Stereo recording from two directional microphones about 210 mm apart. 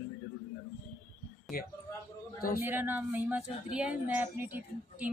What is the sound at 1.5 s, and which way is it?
Speech, 45° left (ahead or behind).